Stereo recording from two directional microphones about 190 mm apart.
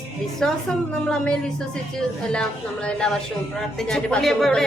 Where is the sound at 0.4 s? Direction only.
Centre (ahead or behind).